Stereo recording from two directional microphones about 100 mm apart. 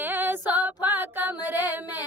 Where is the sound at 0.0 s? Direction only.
20° right (ahead or behind).